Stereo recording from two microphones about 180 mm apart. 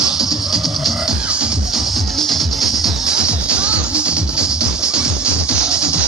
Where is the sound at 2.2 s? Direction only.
Centre (ahead or behind).